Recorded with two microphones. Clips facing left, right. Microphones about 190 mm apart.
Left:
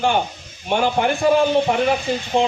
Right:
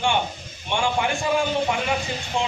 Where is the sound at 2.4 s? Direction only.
60° left (ahead or behind).